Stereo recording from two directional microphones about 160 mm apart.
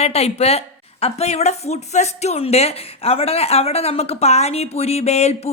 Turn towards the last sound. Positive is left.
turn(degrees=40)  # may be behind; listen again after turning